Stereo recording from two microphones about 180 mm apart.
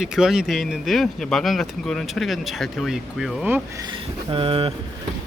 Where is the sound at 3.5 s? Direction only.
20° right (ahead or behind).